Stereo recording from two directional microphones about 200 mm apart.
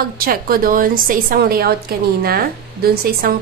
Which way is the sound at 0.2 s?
45° right (ahead or behind).